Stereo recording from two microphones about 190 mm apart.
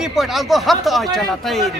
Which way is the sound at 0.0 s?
Centre (ahead or behind).